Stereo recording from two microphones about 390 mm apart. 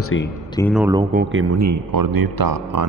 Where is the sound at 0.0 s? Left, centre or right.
Left.